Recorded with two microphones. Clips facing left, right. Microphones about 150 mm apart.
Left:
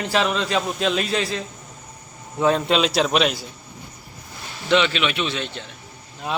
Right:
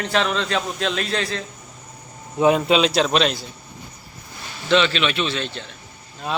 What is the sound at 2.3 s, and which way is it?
Speech, 15° right (ahead or behind).